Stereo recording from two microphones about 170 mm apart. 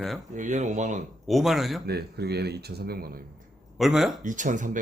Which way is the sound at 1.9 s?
70° right (ahead or behind).